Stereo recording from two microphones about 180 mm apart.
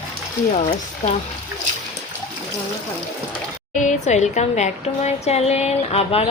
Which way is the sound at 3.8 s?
40° left (ahead or behind).